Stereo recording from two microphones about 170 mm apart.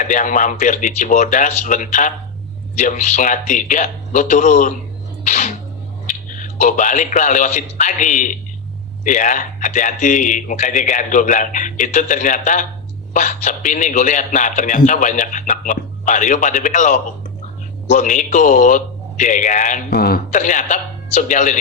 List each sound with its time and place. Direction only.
0.0 s a man's voice: 50° left (ahead or behind)
5.2 s a sound: 45° left (ahead or behind)
6.3 s a man's voice: 50° left (ahead or behind)
19.9 s a man's voice: 65° left (ahead or behind)
20.3 s a man's voice: 50° left (ahead or behind)